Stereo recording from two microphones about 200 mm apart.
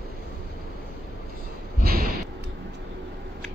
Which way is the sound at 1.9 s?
50° right (ahead or behind).